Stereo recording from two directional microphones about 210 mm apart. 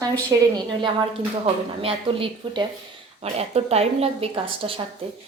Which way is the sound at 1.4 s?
25° right (ahead or behind).